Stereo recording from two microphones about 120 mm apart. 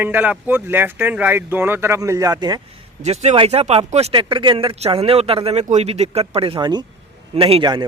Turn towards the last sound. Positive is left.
turn(degrees=-50)  # may be behind; listen again after turning